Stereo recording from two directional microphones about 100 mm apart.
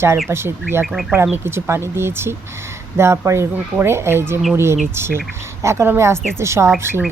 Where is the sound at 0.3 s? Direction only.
25° right (ahead or behind).